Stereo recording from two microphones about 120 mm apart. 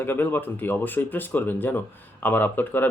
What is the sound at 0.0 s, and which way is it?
Speech, 15° left (ahead or behind).